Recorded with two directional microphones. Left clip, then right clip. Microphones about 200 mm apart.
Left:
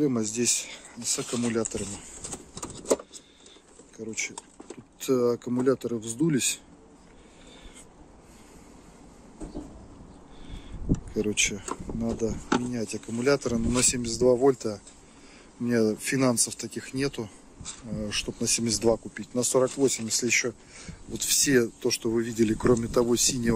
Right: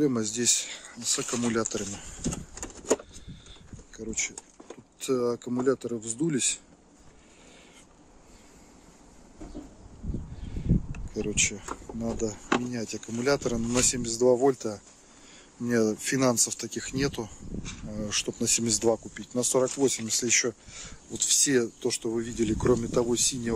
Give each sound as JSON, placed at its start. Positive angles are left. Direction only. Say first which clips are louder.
{"t": 0.0, "sound": "speech", "louder": "even", "side_deg": -20}
{"t": 3.9, "sound": "speech", "louder": "even", "side_deg": -20}
{"t": 11.1, "sound": "speech", "louder": "left 1 dB", "side_deg": 0}
{"t": 11.7, "sound": "speech", "louder": "left 2 dB", "side_deg": -15}